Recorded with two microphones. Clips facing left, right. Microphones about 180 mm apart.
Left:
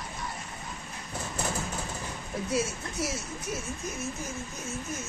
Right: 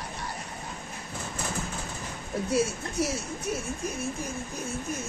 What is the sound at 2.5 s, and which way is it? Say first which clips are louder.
Speech: right 4 dB; 60° right (ahead or behind).